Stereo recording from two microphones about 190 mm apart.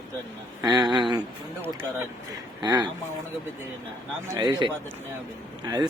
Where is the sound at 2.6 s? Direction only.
20° right (ahead or behind).